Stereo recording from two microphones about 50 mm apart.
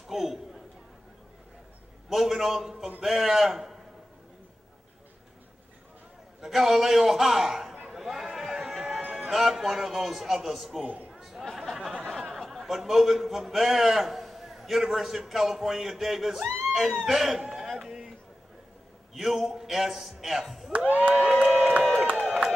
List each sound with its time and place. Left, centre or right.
0.1 s a man's voice: centre
2.0 s a man's voice: centre
6.4 s a man's voice: centre
7.9 s chatter: centre
9.1 s a man's voice: centre
10.8 s crowd: right
11.1 s chatter: centre
12.2 s a man's voice: centre
17.5 s a sound: centre
19.1 s a man's voice: centre
20.7 s crowd: right
21.1 s crowd: centre
22.2 s a sound: centre